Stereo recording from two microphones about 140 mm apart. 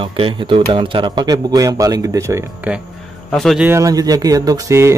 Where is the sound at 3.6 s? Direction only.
20° right (ahead or behind).